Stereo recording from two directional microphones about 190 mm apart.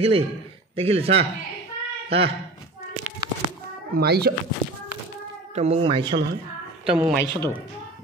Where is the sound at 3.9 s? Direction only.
55° right (ahead or behind).